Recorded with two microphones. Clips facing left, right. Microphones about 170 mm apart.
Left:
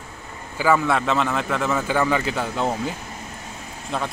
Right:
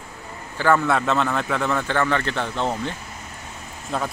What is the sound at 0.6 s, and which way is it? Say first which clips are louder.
A man's voice: even; 5° left (ahead or behind).